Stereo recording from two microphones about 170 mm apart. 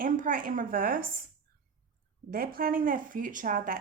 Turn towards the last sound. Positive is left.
turn(degrees=-55)  # may be behind; listen again after turning